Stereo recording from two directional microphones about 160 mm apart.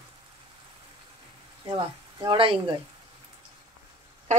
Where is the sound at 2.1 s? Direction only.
30° right (ahead or behind).